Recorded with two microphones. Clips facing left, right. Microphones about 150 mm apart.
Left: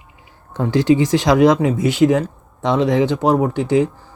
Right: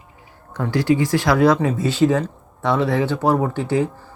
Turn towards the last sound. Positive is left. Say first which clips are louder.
# left 4 dB
turn(degrees=15)  # may be behind; listen again after turning